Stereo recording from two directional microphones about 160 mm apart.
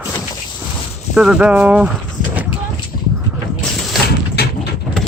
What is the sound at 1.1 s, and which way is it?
Speech, 5° right (ahead or behind).